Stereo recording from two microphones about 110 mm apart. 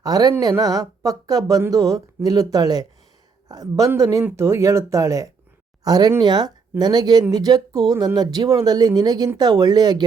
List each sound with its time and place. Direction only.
0.0 s speech: 35° right (ahead or behind)